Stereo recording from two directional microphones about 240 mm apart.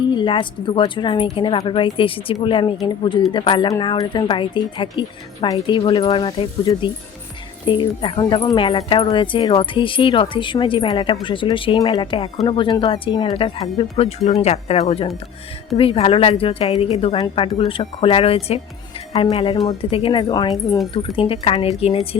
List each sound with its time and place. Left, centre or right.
0.1 s speech: centre